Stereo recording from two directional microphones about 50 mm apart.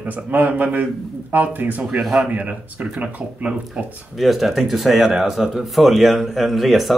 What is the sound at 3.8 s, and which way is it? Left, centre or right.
Speech, centre.